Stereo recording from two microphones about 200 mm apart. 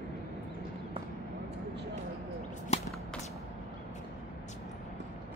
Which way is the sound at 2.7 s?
35° left (ahead or behind).